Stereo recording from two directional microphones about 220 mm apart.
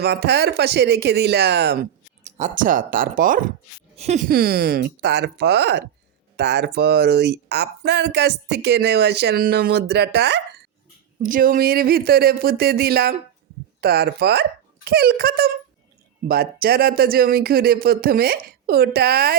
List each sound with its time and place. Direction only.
0.0 s speech: 50° right (ahead or behind)
2.2 s speech: 35° right (ahead or behind)
4.3 s speech: 45° right (ahead or behind)
11.2 s speech: 40° right (ahead or behind)